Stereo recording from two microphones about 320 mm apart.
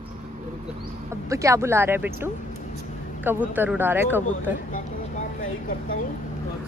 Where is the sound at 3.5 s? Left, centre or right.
Centre.